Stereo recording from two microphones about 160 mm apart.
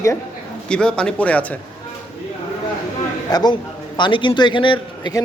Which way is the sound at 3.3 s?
25° left (ahead or behind).